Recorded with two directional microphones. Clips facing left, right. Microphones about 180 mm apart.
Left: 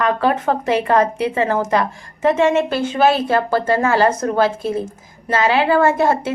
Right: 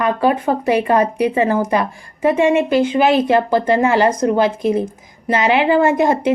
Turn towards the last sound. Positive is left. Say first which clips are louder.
# right 2 dB
turn(degrees=-15)  # may be behind; listen again after turning